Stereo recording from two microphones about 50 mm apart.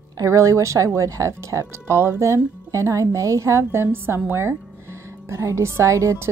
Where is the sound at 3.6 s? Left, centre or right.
Right.